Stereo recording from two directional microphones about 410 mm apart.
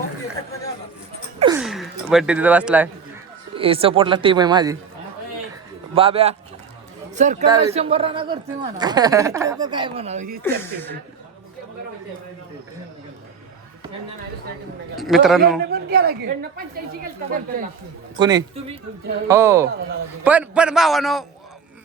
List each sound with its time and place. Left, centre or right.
1.4 s a sound: centre
3.5 s speech: centre
5.9 s speech: centre
14.9 s a man's voice: centre
15.7 s a woman's voice: right
18.2 s a man's voice: centre